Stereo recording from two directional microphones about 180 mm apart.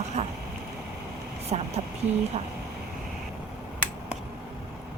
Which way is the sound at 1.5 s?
40° right (ahead or behind).